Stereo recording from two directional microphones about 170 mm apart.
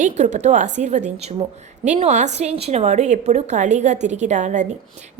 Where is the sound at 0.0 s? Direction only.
45° right (ahead or behind).